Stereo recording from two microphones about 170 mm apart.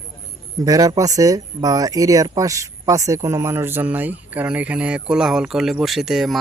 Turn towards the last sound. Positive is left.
turn(degrees=0)  # may be behind; listen again after turning